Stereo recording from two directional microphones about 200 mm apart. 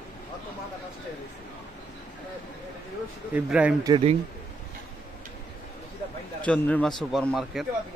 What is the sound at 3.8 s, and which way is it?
Speech, 25° right (ahead or behind).